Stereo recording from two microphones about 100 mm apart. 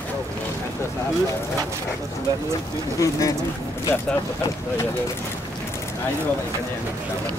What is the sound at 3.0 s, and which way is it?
Speech, 35° left (ahead or behind).